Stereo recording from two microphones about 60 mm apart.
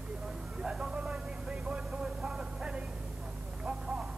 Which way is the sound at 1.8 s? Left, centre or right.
Centre.